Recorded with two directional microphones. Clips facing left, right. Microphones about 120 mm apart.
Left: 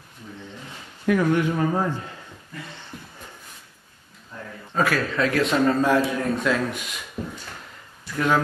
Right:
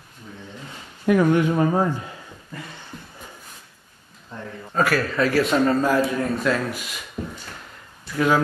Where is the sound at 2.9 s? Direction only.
5° left (ahead or behind).